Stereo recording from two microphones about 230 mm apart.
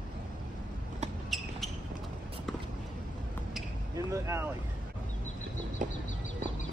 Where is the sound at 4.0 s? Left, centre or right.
Centre.